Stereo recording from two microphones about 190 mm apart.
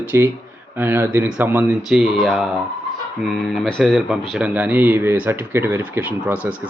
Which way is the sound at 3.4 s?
Centre (ahead or behind).